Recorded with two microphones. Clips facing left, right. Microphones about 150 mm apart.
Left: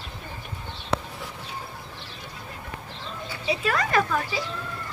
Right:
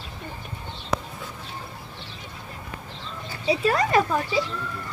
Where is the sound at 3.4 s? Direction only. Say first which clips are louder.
Right 4 dB; 30° right (ahead or behind).